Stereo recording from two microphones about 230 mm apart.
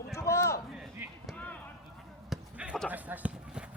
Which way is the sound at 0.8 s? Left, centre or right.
Centre.